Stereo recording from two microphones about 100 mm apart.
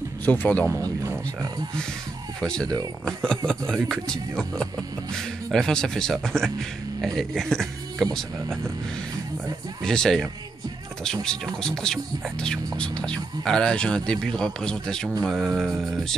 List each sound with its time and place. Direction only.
0.2 s speech: 20° left (ahead or behind)
0.7 s speech: 30° right (ahead or behind)
2.4 s speech: 10° left (ahead or behind)
9.8 s speech: 5° left (ahead or behind)
11.2 s speech: 5° left (ahead or behind)